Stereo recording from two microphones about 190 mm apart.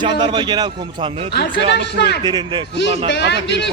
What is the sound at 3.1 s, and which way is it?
Speech, 65° left (ahead or behind).